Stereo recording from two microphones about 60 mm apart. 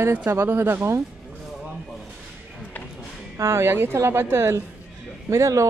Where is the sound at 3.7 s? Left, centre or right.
Right.